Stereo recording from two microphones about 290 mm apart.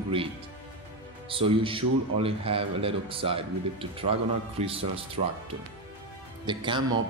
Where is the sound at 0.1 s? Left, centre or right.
Centre.